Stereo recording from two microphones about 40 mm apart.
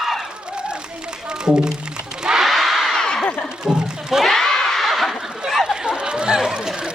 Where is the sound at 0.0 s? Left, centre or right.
Centre.